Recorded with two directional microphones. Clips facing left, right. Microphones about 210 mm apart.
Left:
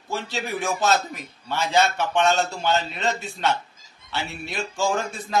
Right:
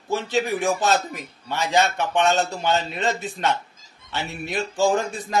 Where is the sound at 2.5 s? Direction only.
15° right (ahead or behind).